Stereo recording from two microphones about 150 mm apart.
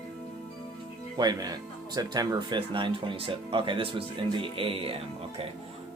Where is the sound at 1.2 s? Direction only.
25° right (ahead or behind).